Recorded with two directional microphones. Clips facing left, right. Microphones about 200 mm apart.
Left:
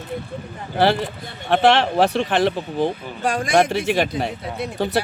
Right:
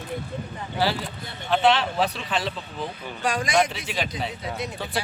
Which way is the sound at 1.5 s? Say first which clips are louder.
Left 5 dB; 60° left (ahead or behind).